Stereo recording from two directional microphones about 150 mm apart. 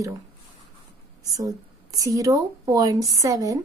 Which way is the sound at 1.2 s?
25° right (ahead or behind).